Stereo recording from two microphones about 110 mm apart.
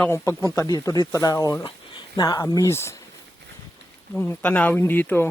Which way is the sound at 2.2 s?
35° left (ahead or behind).